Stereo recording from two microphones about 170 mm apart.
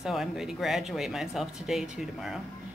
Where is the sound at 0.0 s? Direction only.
Centre (ahead or behind).